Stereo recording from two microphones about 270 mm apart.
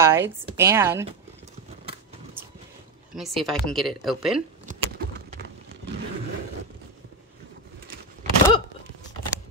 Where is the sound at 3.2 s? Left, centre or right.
Centre.